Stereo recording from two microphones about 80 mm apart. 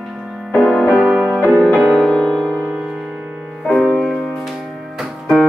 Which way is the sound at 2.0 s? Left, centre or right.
Centre.